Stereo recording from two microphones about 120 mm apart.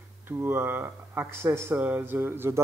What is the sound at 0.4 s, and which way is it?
Speech, 20° right (ahead or behind).